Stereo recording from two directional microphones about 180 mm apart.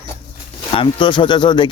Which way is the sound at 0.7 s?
30° left (ahead or behind).